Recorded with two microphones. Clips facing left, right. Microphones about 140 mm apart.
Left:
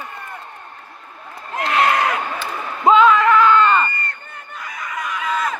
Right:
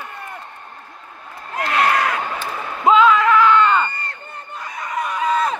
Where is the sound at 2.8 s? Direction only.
Centre (ahead or behind).